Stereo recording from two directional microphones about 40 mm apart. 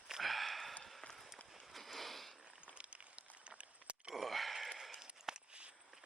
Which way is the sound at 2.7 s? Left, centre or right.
Right.